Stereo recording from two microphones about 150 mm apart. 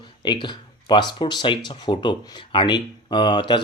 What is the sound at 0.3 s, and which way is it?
Speech, 30° left (ahead or behind).